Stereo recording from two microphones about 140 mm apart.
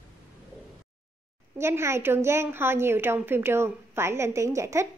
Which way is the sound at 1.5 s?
20° right (ahead or behind).